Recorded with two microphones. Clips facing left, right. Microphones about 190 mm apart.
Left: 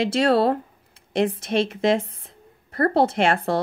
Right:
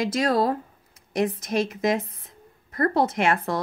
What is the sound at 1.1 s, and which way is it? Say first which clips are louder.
Speech: left 2 dB; 30° left (ahead or behind).